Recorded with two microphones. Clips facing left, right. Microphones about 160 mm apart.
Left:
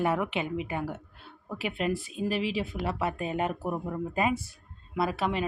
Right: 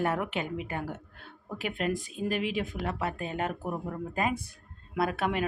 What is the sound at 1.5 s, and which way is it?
Speech, 40° right (ahead or behind).